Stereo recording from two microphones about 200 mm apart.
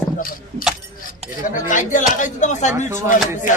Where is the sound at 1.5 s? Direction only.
40° left (ahead or behind).